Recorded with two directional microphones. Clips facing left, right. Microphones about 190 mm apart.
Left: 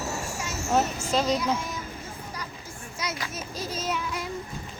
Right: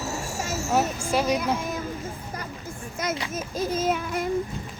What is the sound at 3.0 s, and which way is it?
Children playing, 50° right (ahead or behind).